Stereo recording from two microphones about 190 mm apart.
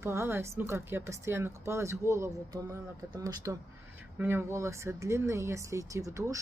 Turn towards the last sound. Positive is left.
turn(degrees=-15)  # may be behind; listen again after turning